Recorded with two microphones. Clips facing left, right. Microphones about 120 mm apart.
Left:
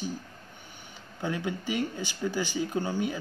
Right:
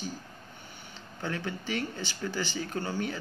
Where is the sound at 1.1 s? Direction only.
15° left (ahead or behind).